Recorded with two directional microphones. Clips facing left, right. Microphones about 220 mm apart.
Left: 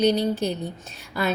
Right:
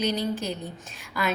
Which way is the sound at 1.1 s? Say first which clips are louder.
Left 3 dB; 30° left (ahead or behind).